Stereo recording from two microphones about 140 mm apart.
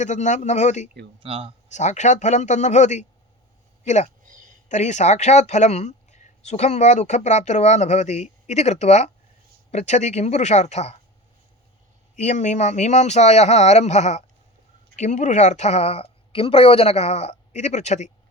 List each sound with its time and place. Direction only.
0.0 s speech: 60° left (ahead or behind)
1.2 s speech: 40° right (ahead or behind)
1.7 s speech: 55° left (ahead or behind)
4.3 s a sound: 70° right (ahead or behind)
4.7 s a woman's voice: 55° left (ahead or behind)
12.1 s a woman's voice: 60° left (ahead or behind)